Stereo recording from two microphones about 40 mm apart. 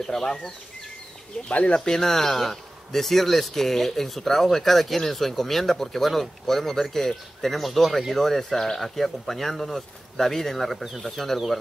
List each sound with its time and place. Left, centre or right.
0.0 s speech: centre
1.7 s speech: left
2.0 s speech: centre